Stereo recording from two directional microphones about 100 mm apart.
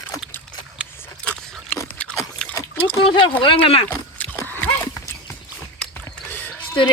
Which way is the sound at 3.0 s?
55° left (ahead or behind).